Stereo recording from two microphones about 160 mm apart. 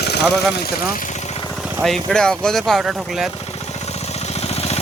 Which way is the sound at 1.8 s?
5° left (ahead or behind).